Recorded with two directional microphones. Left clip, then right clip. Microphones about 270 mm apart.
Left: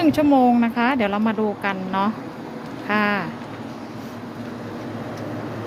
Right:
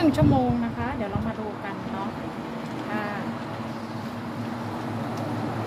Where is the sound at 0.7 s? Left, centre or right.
Left.